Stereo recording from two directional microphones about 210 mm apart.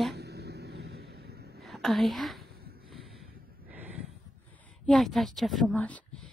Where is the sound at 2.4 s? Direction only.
45° right (ahead or behind).